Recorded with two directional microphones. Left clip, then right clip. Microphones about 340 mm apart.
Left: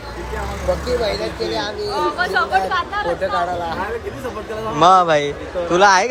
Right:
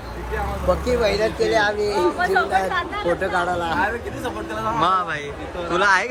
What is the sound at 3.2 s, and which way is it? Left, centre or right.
Speech, right.